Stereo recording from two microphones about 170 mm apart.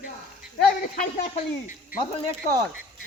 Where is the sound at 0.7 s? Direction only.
55° left (ahead or behind).